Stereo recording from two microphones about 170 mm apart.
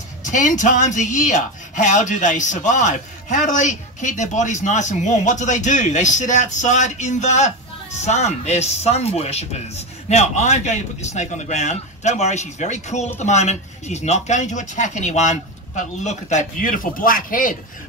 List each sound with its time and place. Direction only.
0.2 s speech: 50° left (ahead or behind)